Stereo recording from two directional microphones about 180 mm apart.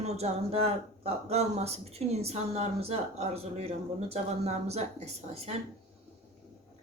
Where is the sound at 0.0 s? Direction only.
35° right (ahead or behind).